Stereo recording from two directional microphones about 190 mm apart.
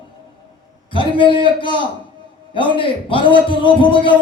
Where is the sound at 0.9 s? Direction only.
25° left (ahead or behind).